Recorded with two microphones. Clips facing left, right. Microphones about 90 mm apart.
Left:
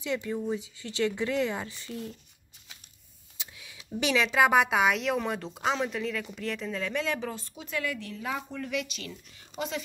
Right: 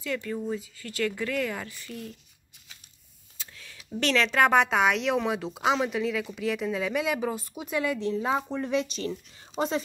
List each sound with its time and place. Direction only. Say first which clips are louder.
0.0 s speech: even; 20° left (ahead or behind)
3.3 s a sound: right 1 dB; 15° left (ahead or behind)
4.0 s a woman's voice: right 1 dB; 10° left (ahead or behind); by 9.1 s 35° right (ahead or behind)